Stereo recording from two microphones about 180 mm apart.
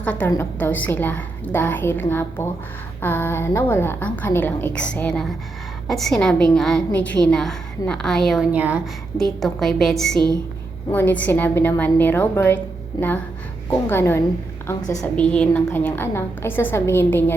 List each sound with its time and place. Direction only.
0.0 s a woman's voice: 5° left (ahead or behind)
13.0 s speech: 25° left (ahead or behind)
13.7 s a woman's voice: 15° left (ahead or behind)
15.0 s a woman's voice: 5° left (ahead or behind)